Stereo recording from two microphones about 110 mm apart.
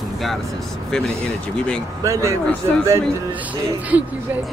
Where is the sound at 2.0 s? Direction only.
25° right (ahead or behind).